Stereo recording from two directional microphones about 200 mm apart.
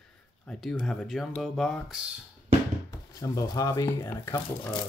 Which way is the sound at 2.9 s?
20° left (ahead or behind).